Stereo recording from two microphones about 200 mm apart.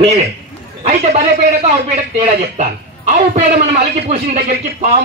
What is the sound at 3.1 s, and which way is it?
Speech, 35° right (ahead or behind).